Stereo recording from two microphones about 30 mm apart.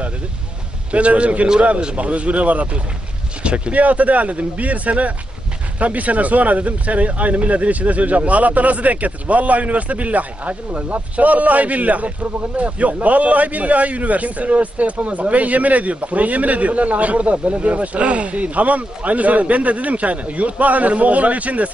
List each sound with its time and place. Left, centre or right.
0.9 s a man's voice: right
3.4 s speech: right
3.7 s a man's voice: right